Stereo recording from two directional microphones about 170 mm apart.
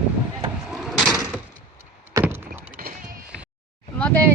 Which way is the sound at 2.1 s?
15° right (ahead or behind).